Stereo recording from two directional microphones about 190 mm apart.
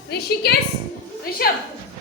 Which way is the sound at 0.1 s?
55° left (ahead or behind).